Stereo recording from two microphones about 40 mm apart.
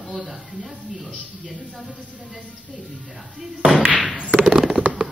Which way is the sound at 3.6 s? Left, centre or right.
Right.